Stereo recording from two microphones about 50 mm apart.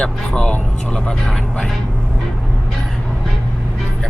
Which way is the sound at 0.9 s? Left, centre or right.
Centre.